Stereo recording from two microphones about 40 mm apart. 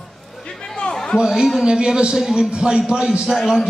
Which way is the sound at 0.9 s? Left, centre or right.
Centre.